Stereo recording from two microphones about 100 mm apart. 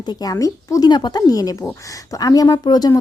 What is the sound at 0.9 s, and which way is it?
Speech, 45° left (ahead or behind).